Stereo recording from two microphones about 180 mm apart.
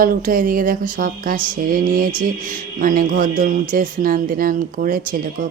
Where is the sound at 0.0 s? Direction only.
50° right (ahead or behind).